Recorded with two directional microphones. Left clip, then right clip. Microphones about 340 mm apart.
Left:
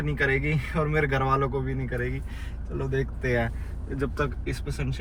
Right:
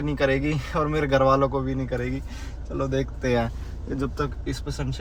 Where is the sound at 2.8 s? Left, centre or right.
Centre.